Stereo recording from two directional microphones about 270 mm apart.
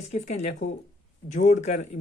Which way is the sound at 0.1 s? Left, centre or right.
Left.